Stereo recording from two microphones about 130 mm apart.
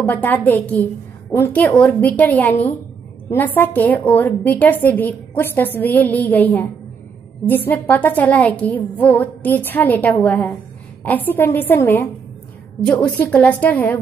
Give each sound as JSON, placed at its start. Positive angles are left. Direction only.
{"t": 0.1, "sound": "a woman's voice", "side_deg": 15}